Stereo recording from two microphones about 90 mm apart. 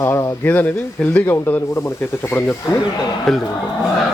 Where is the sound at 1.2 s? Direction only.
25° left (ahead or behind).